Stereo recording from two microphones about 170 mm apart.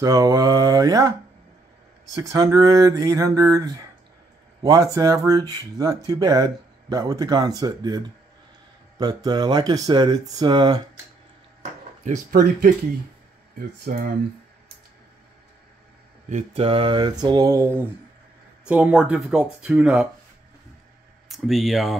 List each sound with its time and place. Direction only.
0.0 s speech: 20° right (ahead or behind)
2.3 s speech: 20° right (ahead or behind)
12.0 s speech: 50° right (ahead or behind)
13.6 s speech: 60° right (ahead or behind)
16.3 s speech: 40° right (ahead or behind); by 17.8 s 15° right (ahead or behind)
18.7 s speech: 5° right (ahead or behind)
21.3 s speech: centre (ahead or behind)